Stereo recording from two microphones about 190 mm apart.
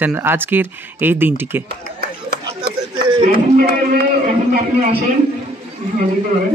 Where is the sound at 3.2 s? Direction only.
50° right (ahead or behind).